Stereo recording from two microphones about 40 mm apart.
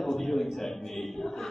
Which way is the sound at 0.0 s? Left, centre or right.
Centre.